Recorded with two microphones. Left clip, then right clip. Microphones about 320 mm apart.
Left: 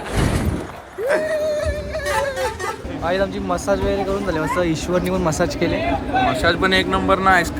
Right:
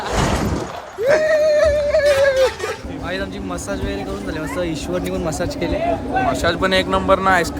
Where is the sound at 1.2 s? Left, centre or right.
Right.